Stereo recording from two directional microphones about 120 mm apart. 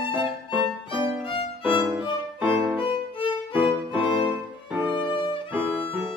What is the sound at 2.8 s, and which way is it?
Violin, 45° left (ahead or behind).